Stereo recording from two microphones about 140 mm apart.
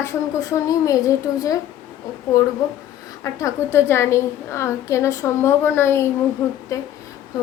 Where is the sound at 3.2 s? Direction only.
20° left (ahead or behind).